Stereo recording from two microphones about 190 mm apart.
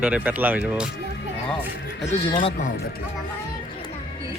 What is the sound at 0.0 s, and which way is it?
Speech, 5° right (ahead or behind).